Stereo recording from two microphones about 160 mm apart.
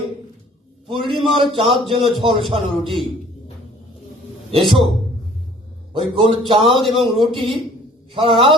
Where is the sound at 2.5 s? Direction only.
35° right (ahead or behind).